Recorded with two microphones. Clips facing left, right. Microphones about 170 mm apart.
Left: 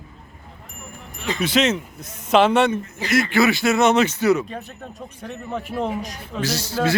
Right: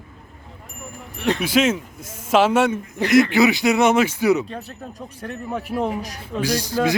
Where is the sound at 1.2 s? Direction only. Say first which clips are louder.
Right 4 dB; 65° right (ahead or behind).